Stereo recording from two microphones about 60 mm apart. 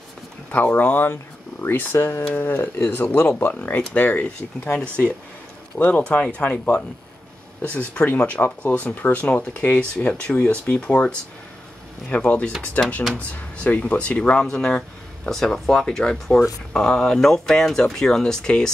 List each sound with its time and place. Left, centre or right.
0.5 s speech: left
1.8 s speech: left
8.1 s speech: left
12.2 s speech: left
12.8 s speech: left; by 18.7 s centre